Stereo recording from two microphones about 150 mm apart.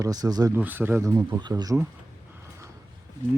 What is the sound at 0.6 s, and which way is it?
Speech, 10° right (ahead or behind).